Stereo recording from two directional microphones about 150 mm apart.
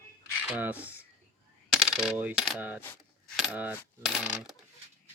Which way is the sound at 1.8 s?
Centre (ahead or behind).